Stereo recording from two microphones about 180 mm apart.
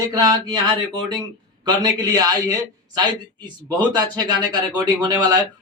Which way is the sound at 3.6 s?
25° right (ahead or behind).